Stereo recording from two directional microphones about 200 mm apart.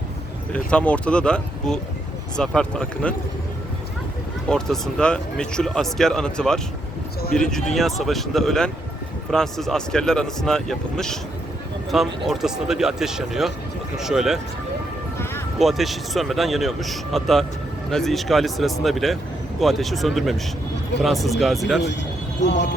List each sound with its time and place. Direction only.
0.5 s speech: 5° left (ahead or behind)
4.4 s speech: 5° left (ahead or behind)
15.5 s speech: centre (ahead or behind)
22.4 s speech: 60° left (ahead or behind)